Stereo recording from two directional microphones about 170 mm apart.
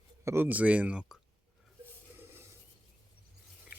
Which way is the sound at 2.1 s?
15° right (ahead or behind).